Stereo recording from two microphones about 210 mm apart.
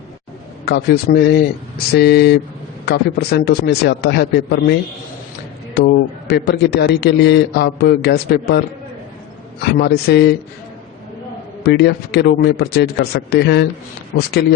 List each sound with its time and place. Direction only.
0.6 s a man's voice: 50° left (ahead or behind)
9.7 s a man's voice: 50° left (ahead or behind)
11.6 s a man's voice: 50° left (ahead or behind)